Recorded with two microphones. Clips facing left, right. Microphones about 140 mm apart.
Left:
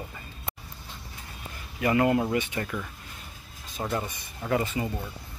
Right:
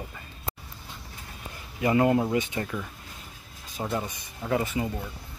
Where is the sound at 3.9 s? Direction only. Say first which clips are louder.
Even; 10° right (ahead or behind).